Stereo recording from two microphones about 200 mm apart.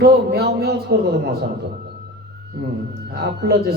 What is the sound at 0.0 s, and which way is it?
A man's voice, 50° right (ahead or behind).